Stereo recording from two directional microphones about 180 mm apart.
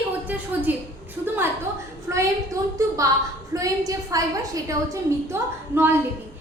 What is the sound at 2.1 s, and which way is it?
A woman's voice, 15° right (ahead or behind).